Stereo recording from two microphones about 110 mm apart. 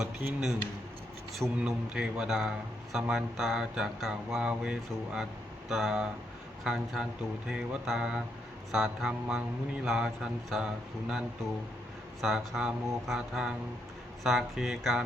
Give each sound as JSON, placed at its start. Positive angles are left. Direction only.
{"t": 0.0, "sound": "a man's voice", "side_deg": -10}
{"t": 12.2, "sound": "a man's voice", "side_deg": -5}